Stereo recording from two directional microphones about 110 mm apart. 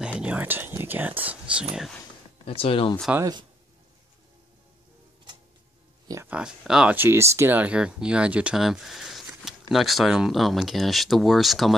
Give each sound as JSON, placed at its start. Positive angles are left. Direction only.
{"t": 0.2, "sound": "speech", "side_deg": -15}
{"t": 2.4, "sound": "speech", "side_deg": 55}
{"t": 6.2, "sound": "speech", "side_deg": -10}
{"t": 7.0, "sound": "speech", "side_deg": -25}